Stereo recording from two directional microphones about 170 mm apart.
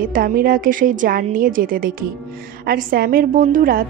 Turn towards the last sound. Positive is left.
turn(degrees=-55)  # may be behind; listen again after turning